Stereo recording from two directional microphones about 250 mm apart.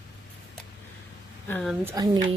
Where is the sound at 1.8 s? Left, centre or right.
Centre.